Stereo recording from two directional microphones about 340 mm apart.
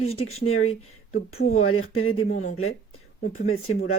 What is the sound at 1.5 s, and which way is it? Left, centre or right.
Speech, left.